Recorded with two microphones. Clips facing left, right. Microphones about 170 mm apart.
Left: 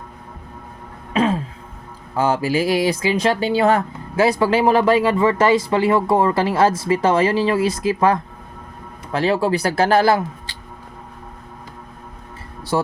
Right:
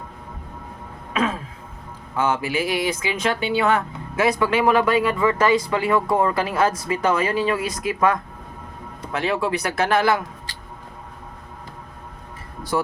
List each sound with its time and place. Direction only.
1.1 s a sound: 30° left (ahead or behind)
2.1 s speech: 35° left (ahead or behind)
12.7 s speech: 30° left (ahead or behind)